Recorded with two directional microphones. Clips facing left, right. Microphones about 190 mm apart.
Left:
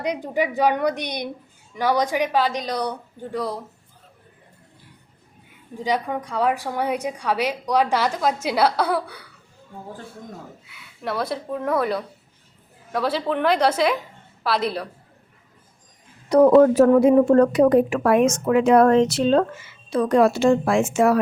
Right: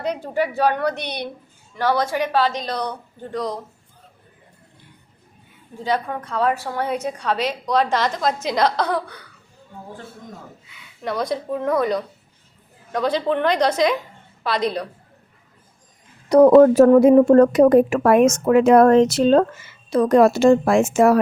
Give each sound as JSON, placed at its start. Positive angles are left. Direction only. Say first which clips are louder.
{"t": 0.0, "sound": "a woman's voice", "louder": "right 1 dB", "side_deg": 15}
{"t": 5.7, "sound": "a woman's voice", "louder": "even", "side_deg": 15}
{"t": 10.7, "sound": "speech", "louder": "right 2 dB", "side_deg": 5}
{"t": 16.3, "sound": "speech", "louder": "right 3 dB", "side_deg": -45}